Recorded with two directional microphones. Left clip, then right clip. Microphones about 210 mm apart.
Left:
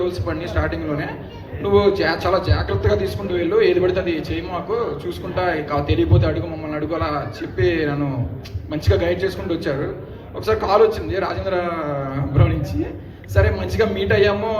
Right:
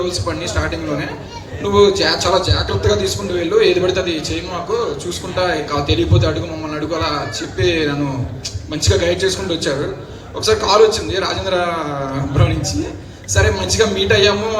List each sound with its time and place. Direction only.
0.0 s a man's voice: 55° right (ahead or behind)
5.4 s a man's voice: 55° right (ahead or behind)
13.3 s a man's voice: 55° right (ahead or behind)